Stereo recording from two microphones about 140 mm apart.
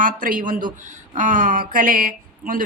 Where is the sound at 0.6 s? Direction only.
35° right (ahead or behind).